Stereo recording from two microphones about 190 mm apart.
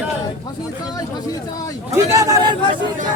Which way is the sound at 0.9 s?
20° left (ahead or behind).